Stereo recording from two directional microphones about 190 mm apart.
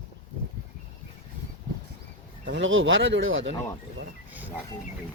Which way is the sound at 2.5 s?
85° right.